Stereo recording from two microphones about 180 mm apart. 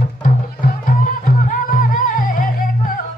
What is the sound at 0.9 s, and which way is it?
Music, 50° left (ahead or behind).